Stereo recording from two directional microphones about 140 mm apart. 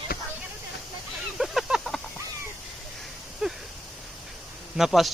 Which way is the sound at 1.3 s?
Centre (ahead or behind).